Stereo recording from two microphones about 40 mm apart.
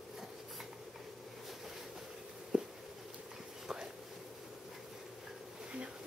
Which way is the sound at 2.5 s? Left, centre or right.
Right.